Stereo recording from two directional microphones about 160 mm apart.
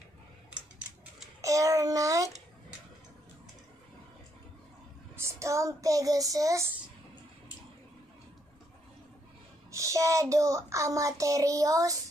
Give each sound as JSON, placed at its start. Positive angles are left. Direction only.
{"t": 1.4, "sound": "child singing", "side_deg": -20}
{"t": 5.1, "sound": "child singing", "side_deg": -20}
{"t": 9.7, "sound": "speech", "side_deg": -20}